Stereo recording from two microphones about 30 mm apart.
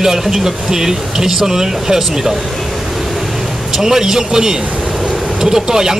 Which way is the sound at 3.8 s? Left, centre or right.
Centre.